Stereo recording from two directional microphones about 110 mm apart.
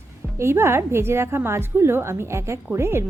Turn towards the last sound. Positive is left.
turn(degrees=-25)  # may be behind; listen again after turning